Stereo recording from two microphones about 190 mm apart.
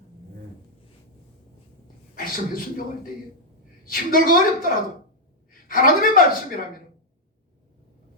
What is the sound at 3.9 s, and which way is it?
Speech, 50° left (ahead or behind).